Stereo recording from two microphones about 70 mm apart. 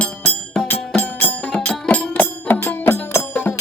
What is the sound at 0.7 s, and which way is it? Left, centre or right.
Music, left.